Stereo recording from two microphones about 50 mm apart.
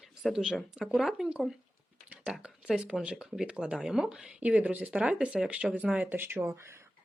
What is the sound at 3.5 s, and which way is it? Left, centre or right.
Speech, right.